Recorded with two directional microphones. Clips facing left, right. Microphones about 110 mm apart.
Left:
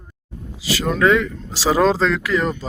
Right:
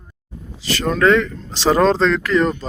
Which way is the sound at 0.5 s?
5° left (ahead or behind).